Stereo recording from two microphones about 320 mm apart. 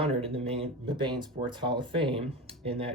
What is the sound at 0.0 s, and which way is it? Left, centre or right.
Speech, centre.